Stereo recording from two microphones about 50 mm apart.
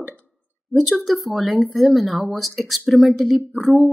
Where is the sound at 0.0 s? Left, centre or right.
Right.